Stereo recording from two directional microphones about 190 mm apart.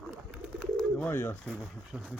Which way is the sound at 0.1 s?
10° right (ahead or behind).